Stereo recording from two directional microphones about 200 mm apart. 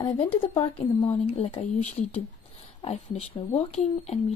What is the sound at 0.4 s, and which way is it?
Speech, 25° left (ahead or behind).